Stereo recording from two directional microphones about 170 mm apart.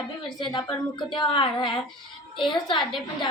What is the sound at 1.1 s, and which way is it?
Speech, 30° left (ahead or behind).